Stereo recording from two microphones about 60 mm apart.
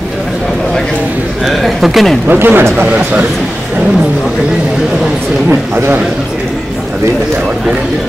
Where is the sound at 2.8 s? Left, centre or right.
Right.